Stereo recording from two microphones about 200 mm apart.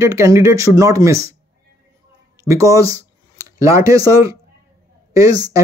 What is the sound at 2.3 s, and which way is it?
Speech, 15° right (ahead or behind).